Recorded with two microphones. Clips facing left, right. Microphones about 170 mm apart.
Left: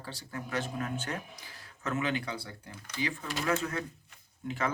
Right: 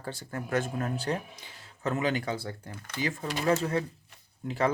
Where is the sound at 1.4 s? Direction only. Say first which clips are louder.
Right 5 dB; 25° right (ahead or behind).